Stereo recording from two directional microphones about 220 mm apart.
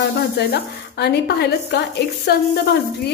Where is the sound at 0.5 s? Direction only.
50° left (ahead or behind).